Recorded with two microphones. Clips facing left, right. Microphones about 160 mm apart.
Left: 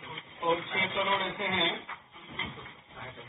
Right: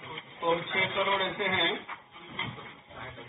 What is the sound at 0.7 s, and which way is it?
Speech, 15° left (ahead or behind).